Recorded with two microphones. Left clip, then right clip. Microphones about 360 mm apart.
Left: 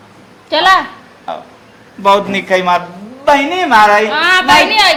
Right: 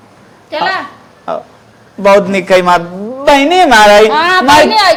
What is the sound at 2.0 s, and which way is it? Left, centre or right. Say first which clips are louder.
A man's voice: right 4 dB; right.